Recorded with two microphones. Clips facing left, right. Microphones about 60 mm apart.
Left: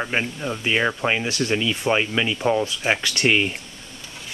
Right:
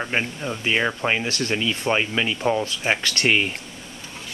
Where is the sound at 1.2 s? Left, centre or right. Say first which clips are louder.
Left 2 dB; centre.